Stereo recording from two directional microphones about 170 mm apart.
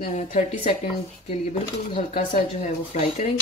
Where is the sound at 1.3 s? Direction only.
50° left (ahead or behind).